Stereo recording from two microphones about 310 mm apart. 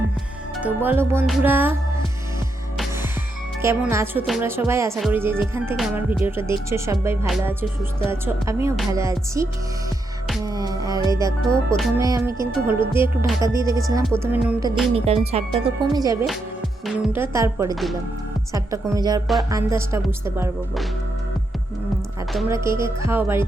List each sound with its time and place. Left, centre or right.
0.5 s speech: centre
3.6 s speech: centre
10.4 s music: centre
12.5 s speech: centre
14.4 s music: centre
14.9 s speech: centre
22.3 s speech: centre